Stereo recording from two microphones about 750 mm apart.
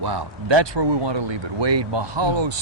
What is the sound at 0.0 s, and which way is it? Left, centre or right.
Speech, right.